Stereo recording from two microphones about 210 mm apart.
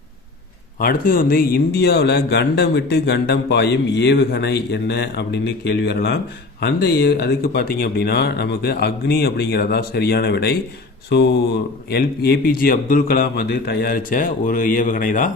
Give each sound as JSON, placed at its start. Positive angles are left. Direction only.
{"t": 0.8, "sound": "speech", "side_deg": 45}